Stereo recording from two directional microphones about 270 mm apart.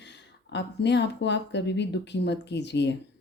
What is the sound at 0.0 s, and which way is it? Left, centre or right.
A woman's voice, left.